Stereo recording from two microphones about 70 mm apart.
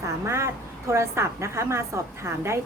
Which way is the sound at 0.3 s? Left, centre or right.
Right.